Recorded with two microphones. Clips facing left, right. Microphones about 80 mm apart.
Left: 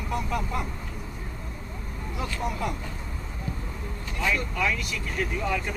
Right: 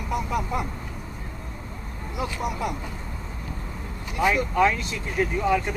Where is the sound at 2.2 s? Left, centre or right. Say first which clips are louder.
Right 2 dB; centre.